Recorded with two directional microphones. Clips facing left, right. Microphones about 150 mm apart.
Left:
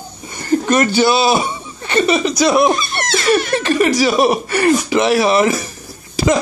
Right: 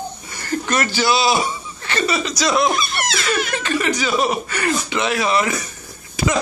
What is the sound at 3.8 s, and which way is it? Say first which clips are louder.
Speech: left 7 dB; 35° left (ahead or behind).